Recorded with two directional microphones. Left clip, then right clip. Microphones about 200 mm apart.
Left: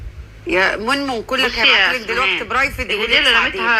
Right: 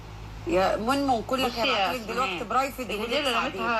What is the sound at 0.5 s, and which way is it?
A man's voice, 20° left (ahead or behind).